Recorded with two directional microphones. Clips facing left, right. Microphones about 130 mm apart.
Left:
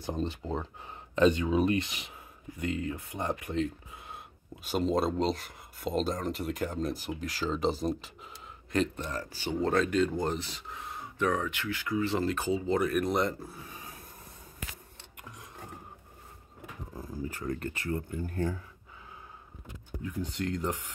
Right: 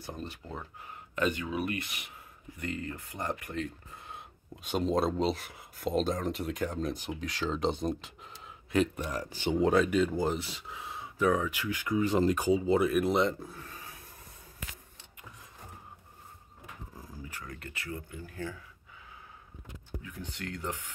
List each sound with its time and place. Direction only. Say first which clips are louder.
0.0 s speech: left 7 dB; 25° left (ahead or behind)
4.6 s speech: even; centre (ahead or behind)
13.6 s filing: left 1 dB; 15° left (ahead or behind)
17.3 s speech: left 9 dB; 40° left (ahead or behind)
20.0 s speech: left 10 dB; 35° left (ahead or behind)